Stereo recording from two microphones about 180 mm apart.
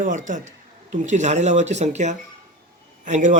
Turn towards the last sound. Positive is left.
turn(degrees=-40)  # may be behind; listen again after turning